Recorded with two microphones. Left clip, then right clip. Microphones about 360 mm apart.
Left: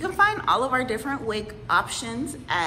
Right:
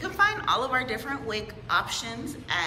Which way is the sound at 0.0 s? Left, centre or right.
Centre.